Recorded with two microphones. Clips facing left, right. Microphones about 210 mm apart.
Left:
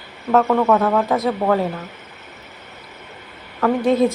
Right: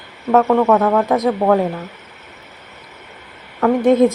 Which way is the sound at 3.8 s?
20° right (ahead or behind).